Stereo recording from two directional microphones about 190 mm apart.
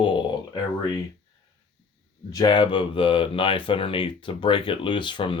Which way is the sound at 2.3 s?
20° left (ahead or behind).